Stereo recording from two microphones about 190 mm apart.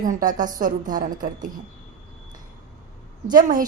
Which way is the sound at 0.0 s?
45° right (ahead or behind).